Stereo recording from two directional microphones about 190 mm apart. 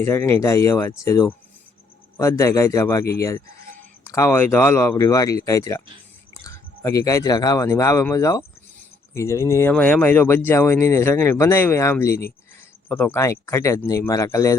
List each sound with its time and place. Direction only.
0.0 s speech: 10° left (ahead or behind)